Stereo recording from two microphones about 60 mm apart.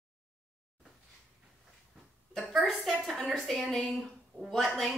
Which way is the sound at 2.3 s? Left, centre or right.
Centre.